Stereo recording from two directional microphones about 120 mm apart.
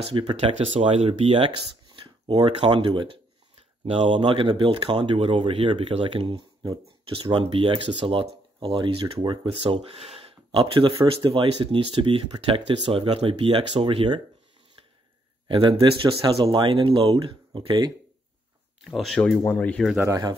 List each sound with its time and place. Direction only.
0.0 s speech: 45° right (ahead or behind)
0.5 s speech: 60° right (ahead or behind)
1.9 s speech: 45° right (ahead or behind)
15.4 s speech: 45° right (ahead or behind)
18.9 s speech: centre (ahead or behind)
19.4 s speech: 15° left (ahead or behind)